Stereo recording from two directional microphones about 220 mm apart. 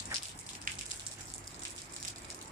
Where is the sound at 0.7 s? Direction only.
40° right (ahead or behind).